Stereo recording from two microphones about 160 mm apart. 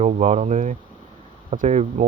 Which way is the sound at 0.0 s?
45° right (ahead or behind).